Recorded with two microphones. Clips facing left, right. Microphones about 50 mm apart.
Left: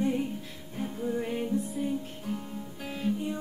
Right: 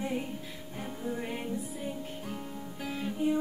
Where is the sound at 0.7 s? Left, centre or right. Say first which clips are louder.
Left 5 dB; centre.